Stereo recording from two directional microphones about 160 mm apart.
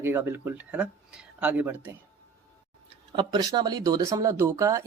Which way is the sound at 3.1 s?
25° right (ahead or behind).